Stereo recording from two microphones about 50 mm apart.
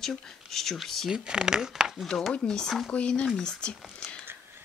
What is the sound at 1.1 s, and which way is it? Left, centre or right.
Speech, centre.